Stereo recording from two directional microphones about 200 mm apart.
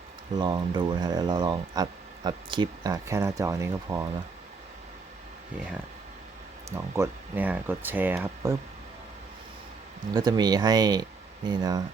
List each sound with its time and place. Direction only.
0.3 s speech: 20° right (ahead or behind)
6.7 s speech: 15° right (ahead or behind)
10.2 s speech: 20° right (ahead or behind)